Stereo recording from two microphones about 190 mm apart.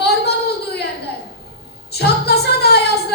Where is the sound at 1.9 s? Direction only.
60° left (ahead or behind).